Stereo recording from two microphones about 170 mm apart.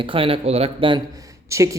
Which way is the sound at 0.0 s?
30° right (ahead or behind).